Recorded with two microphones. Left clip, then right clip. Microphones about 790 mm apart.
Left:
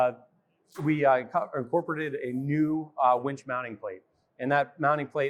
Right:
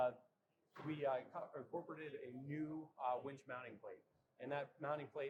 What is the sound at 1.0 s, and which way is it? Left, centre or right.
A man's voice, left.